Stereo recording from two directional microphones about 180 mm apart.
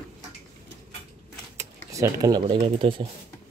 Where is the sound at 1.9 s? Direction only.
20° right (ahead or behind).